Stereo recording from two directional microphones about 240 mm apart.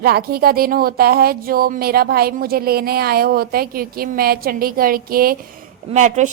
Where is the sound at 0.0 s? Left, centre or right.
Right.